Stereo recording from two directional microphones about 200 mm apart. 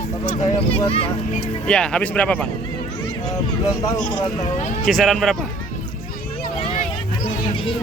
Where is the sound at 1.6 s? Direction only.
5° left (ahead or behind).